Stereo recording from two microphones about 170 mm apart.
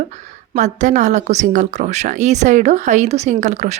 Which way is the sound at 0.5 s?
45° right (ahead or behind).